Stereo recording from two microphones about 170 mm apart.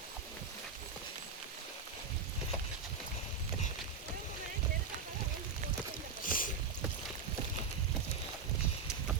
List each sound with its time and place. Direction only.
6.2 s rowboat: 55° left (ahead or behind)